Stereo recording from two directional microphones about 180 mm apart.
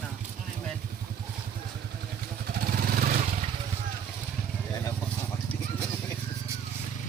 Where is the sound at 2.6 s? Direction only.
55° right (ahead or behind).